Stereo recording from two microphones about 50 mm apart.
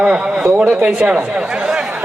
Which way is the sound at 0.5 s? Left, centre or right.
Right.